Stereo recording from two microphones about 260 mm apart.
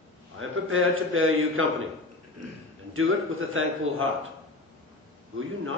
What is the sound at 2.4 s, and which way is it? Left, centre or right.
Speech, right.